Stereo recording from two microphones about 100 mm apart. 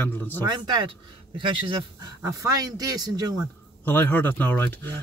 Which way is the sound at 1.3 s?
55° right (ahead or behind).